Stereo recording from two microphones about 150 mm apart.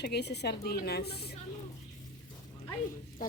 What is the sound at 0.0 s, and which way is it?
A woman's voice, 90° left.